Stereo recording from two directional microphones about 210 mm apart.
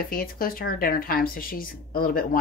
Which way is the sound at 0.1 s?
45° left (ahead or behind).